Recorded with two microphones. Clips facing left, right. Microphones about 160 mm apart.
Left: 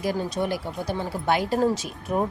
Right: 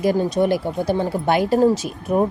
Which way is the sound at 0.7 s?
45° right (ahead or behind).